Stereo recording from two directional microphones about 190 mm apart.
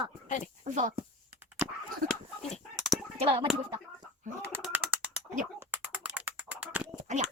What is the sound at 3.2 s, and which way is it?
Speech, 30° right (ahead or behind).